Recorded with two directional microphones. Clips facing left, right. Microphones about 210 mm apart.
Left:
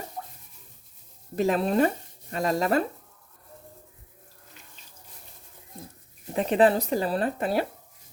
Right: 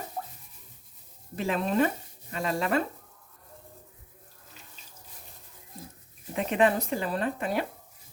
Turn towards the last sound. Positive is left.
turn(degrees=35)  # may be behind; listen again after turning